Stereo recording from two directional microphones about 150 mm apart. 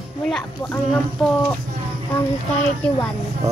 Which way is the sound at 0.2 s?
10° left (ahead or behind).